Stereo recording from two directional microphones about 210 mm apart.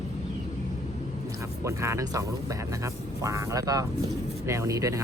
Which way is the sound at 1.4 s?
15° right (ahead or behind).